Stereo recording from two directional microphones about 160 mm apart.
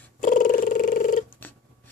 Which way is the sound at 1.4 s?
10° left (ahead or behind).